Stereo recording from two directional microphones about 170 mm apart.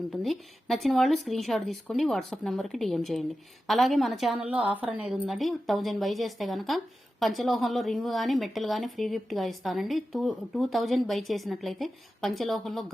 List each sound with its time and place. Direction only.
0.1 s a woman's voice: centre (ahead or behind)